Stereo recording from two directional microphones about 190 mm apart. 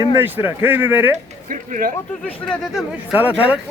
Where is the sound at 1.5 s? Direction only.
45° right (ahead or behind).